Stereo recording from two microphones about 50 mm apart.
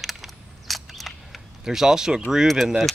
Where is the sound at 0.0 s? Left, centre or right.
Centre.